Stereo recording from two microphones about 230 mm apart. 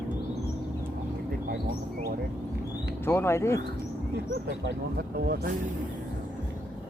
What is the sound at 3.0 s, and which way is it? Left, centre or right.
Speech, centre.